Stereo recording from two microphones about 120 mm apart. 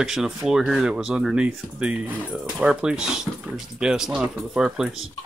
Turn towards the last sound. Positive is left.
turn(degrees=-5)  # may be behind; listen again after turning